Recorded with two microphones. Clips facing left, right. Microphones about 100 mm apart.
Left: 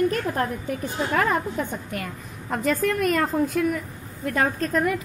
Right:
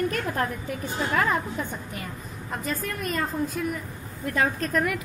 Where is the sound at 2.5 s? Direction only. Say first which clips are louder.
Left 8 dB; 75° left (ahead or behind).